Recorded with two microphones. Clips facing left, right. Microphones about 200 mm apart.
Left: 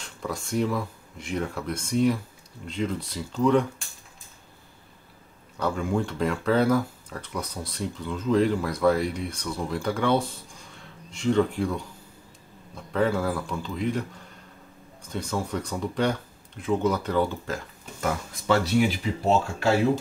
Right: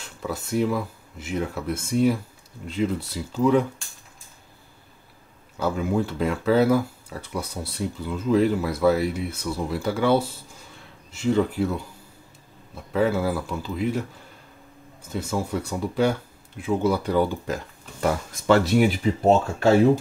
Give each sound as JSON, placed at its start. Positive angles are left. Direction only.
{"t": 0.0, "sound": "speech", "side_deg": -5}
{"t": 5.6, "sound": "speech", "side_deg": -5}
{"t": 18.5, "sound": "speech", "side_deg": -50}